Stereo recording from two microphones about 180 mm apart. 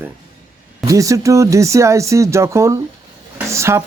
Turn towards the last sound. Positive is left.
turn(degrees=-15)  # may be behind; listen again after turning